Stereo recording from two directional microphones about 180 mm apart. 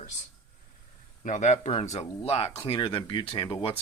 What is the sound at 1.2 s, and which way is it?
Speech, 45° left (ahead or behind).